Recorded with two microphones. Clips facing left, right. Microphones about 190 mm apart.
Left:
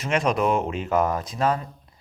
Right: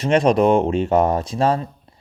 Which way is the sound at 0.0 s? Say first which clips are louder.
Right 7 dB; 35° right (ahead or behind).